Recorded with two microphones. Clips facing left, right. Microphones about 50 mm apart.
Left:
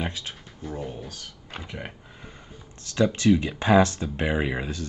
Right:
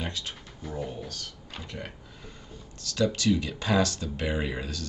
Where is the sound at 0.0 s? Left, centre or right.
Centre.